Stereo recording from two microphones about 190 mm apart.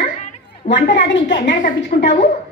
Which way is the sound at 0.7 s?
70° left (ahead or behind).